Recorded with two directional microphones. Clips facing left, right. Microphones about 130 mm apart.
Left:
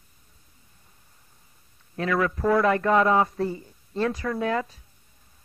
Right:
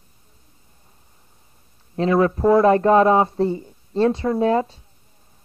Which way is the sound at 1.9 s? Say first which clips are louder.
Right 7 dB; 30° right (ahead or behind).